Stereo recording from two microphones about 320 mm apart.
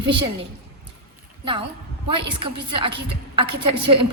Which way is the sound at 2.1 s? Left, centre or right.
Centre.